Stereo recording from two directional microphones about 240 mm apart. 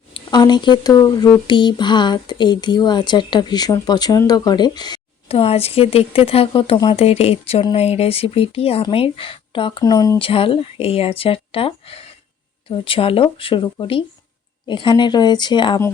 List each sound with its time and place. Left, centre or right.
0.1 s speech: centre